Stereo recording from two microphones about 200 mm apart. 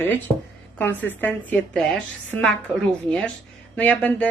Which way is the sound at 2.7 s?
5° left (ahead or behind).